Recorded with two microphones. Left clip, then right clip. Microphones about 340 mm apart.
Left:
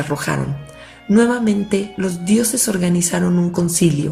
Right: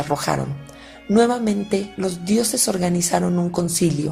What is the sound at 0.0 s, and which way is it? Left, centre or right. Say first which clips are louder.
Speech: even; centre.